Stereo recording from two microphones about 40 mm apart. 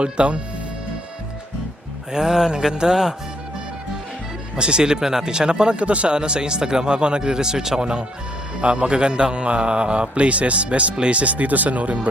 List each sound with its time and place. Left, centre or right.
0.0 s a man's voice: right
2.1 s speech: centre
4.5 s a man's voice: right
5.8 s a man's voice: right